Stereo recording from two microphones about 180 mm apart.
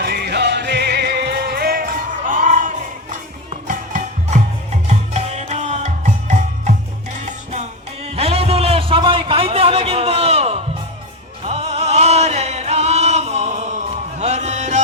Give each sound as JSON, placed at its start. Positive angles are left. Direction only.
{"t": 0.0, "sound": "music", "side_deg": -65}